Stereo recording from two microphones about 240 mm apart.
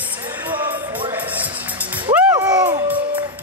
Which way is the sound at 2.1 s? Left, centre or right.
Centre.